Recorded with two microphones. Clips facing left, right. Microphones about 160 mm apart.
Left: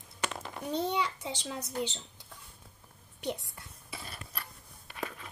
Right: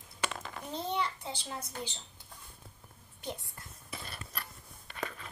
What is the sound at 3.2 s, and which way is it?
Speech, 75° left (ahead or behind).